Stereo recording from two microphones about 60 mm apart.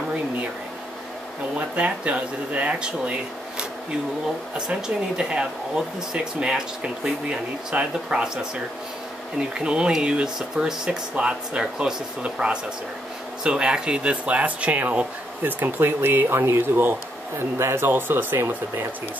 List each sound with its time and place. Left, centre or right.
1.6 s speech: centre
9.4 s speech: centre; by 18.9 s right